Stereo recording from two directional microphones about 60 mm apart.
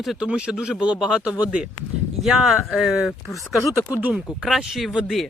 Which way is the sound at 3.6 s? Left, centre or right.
Left.